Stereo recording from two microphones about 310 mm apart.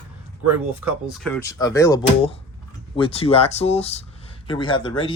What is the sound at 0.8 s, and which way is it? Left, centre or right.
Speech, centre.